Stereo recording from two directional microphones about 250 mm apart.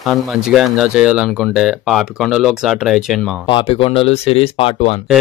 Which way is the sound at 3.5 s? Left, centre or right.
Left.